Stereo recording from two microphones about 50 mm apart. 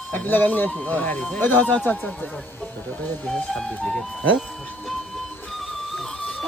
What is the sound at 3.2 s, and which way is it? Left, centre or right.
Speech, centre.